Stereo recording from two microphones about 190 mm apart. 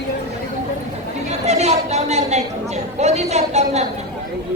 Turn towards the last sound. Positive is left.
turn(degrees=-35)  # may be behind; listen again after turning